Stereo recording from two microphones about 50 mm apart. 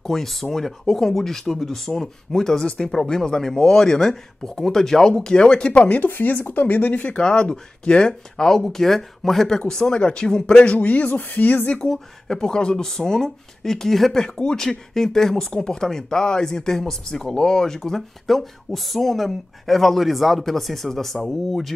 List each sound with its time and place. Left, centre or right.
0.0 s speech: centre; by 5.9 s left
5.9 s speech: left
7.1 s speech: left
11.7 s speech: centre